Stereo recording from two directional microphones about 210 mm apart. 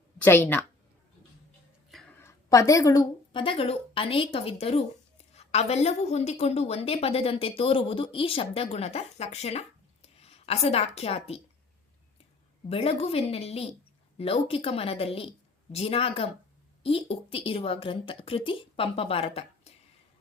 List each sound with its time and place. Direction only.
0.2 s a woman's voice: 10° left (ahead or behind)
1.9 s a woman's voice: 5° left (ahead or behind); by 11.3 s 30° left (ahead or behind)
12.6 s a woman's voice: 30° left (ahead or behind)